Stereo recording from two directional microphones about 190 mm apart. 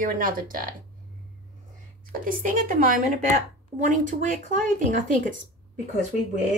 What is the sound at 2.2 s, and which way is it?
A woman's voice, 45° right (ahead or behind).